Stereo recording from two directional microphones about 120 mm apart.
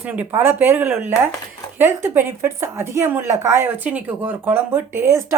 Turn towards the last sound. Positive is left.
turn(degrees=-20)  # may be behind; listen again after turning